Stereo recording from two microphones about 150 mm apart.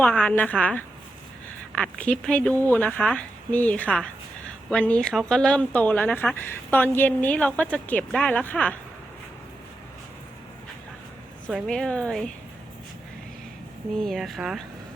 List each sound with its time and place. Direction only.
0.0 s speech: 10° left (ahead or behind)
11.5 s speech: 5° left (ahead or behind)
13.9 s speech: centre (ahead or behind)